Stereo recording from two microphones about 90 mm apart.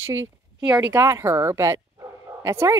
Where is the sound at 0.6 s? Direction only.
15° right (ahead or behind).